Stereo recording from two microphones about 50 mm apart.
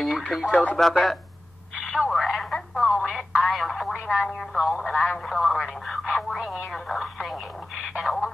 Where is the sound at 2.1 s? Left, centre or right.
Centre.